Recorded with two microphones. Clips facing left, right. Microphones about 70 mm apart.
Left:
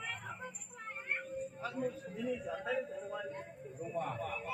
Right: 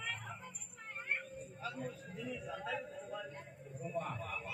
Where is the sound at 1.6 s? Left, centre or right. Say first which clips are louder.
Left 3 dB; left.